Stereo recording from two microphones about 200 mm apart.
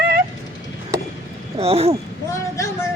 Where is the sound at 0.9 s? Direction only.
15° right (ahead or behind).